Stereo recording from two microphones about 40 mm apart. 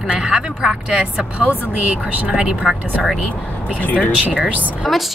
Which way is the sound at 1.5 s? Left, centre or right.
Right.